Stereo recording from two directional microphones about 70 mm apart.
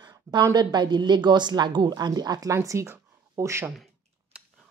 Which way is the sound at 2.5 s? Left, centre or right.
Right.